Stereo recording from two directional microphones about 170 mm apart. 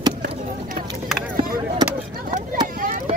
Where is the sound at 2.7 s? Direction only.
55° right (ahead or behind).